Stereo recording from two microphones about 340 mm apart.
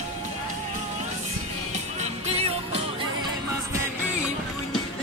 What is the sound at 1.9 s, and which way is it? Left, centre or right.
Music, centre.